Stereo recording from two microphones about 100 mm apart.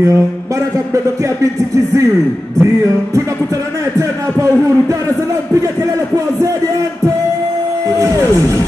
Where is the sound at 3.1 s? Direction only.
30° right (ahead or behind).